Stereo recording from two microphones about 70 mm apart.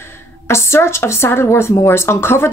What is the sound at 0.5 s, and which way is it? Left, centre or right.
Speech, left.